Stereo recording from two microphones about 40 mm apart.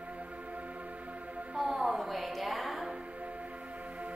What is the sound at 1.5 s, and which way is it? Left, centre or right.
Music, centre.